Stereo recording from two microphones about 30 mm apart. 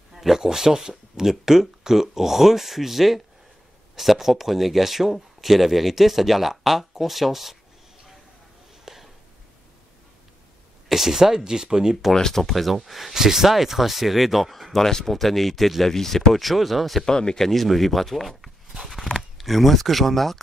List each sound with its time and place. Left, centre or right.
0.1 s speech: centre
8.8 s a sound: centre
10.9 s speech: centre
12.1 s speech: centre
12.4 s speech: centre
13.1 s speech: centre
14.9 s speech: centre
15.1 s speech: centre
17.0 s speech: left
17.4 s speech: centre